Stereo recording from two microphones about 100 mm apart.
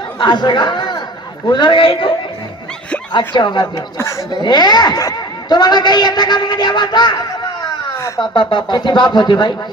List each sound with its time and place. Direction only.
0.2 s a man's voice: 50° left (ahead or behind)
3.7 s speech: 25° left (ahead or behind)
4.3 s speech: 45° left (ahead or behind)
8.2 s speech: 55° left (ahead or behind)